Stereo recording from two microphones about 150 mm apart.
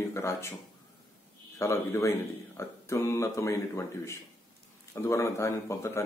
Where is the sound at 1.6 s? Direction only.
20° left (ahead or behind).